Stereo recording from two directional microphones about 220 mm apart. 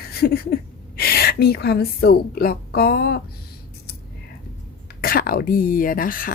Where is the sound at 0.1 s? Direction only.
45° left (ahead or behind).